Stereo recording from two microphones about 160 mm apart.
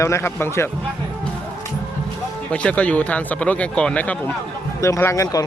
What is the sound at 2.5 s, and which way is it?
Speech, 10° left (ahead or behind).